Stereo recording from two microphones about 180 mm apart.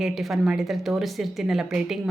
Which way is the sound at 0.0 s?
Centre (ahead or behind).